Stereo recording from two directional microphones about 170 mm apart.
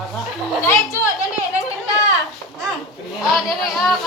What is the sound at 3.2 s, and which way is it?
Speech, centre (ahead or behind).